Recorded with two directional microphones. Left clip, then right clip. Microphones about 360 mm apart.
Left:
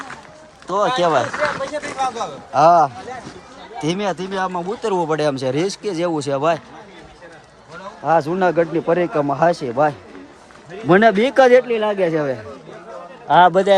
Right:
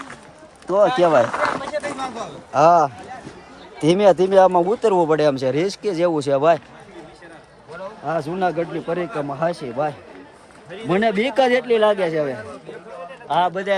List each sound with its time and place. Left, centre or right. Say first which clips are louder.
0.7 s speech: right 1 dB; centre
1.7 s speech: left 3 dB; centre
2.5 s speech: left 2 dB; centre
8.0 s speech: left 6 dB; centre
13.2 s a man's voice: left 8 dB; left